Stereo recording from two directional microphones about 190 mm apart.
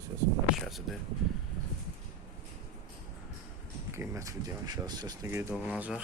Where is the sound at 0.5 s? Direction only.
Centre (ahead or behind).